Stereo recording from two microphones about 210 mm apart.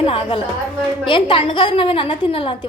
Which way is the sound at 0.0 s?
25° left (ahead or behind).